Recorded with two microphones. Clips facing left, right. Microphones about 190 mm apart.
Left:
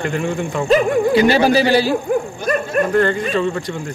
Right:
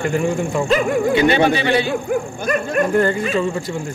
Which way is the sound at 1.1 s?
35° left (ahead or behind).